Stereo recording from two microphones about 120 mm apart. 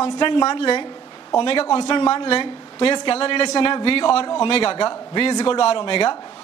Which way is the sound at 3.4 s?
35° left (ahead or behind).